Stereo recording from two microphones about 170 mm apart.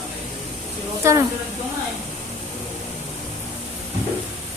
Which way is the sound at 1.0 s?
15° right (ahead or behind).